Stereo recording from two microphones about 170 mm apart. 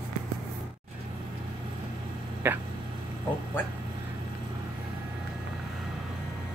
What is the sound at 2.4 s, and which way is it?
Speech, 10° right (ahead or behind).